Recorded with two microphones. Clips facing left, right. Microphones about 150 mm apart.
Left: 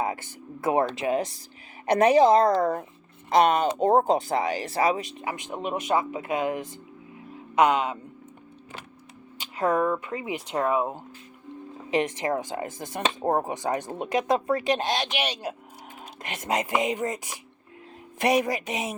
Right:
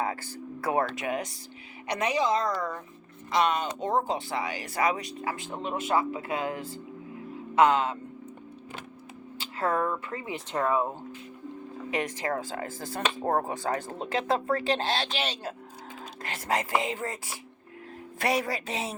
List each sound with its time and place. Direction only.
0.0 s speech: 20° left (ahead or behind)
1.9 s speech: 50° left (ahead or behind); by 7.9 s 15° left (ahead or behind)
9.4 s speech: 15° left (ahead or behind)
11.9 s speech: 20° left (ahead or behind)